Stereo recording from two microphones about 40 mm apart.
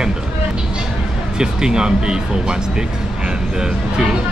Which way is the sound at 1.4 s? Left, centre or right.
Centre.